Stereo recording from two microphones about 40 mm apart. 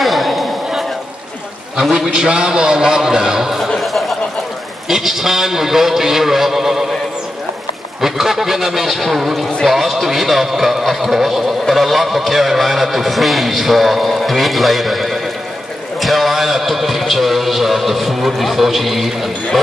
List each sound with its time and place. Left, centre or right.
0.0 s a sound: centre
1.8 s a man's voice: centre
2.1 s a man's voice: right
3.7 s chuckle: centre
4.8 s a man's voice: centre
8.0 s a man's voice: centre